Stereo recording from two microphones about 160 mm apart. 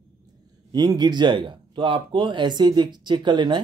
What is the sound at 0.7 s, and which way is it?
Speech, 25° right (ahead or behind).